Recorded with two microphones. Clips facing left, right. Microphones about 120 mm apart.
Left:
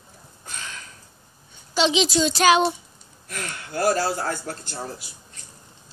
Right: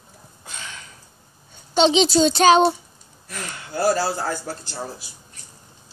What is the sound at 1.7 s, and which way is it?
A child's voice, 30° right (ahead or behind).